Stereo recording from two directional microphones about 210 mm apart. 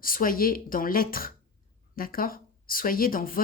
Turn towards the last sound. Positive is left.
turn(degrees=40)  # may be behind; listen again after turning